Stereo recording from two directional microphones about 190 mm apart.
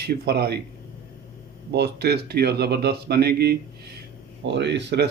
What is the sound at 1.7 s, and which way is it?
Speech, 60° right (ahead or behind).